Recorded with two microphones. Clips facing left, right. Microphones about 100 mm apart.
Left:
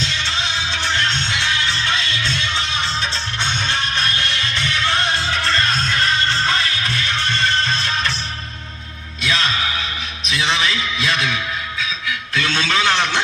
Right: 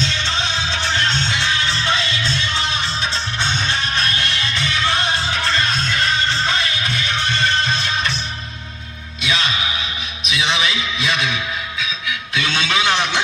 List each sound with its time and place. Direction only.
0.1 s music: 30° right (ahead or behind)
2.4 s music: 20° left (ahead or behind)
3.9 s music: 20° right (ahead or behind)
9.2 s music: 5° right (ahead or behind)
12.3 s a sound: 5° right (ahead or behind)